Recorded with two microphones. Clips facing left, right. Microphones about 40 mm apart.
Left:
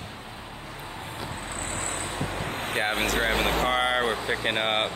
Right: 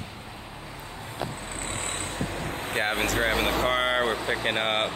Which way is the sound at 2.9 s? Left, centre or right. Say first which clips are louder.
Even; left.